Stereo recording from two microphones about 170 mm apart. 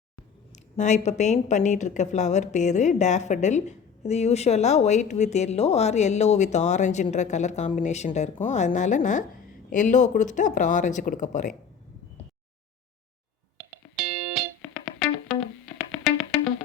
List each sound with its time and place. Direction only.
0.8 s a woman's voice: 45° left (ahead or behind)
14.0 s music: 5° right (ahead or behind)